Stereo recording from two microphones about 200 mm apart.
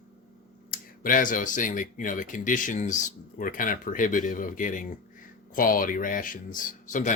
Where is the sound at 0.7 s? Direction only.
45° left (ahead or behind).